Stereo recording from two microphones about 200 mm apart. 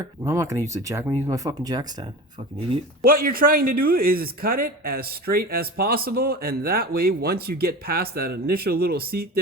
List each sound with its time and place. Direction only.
0.0 s speech: 15° right (ahead or behind)
3.1 s speech: 45° right (ahead or behind)